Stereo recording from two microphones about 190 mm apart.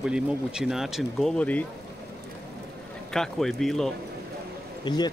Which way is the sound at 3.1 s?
Centre (ahead or behind).